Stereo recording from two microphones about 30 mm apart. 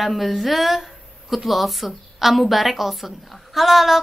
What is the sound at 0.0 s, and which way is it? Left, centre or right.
A woman's voice, centre.